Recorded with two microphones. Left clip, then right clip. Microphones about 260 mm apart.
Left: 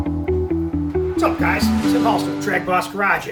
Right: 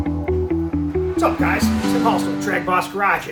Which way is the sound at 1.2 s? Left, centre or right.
Centre.